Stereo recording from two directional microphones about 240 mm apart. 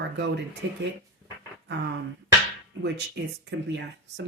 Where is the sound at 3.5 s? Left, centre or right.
Right.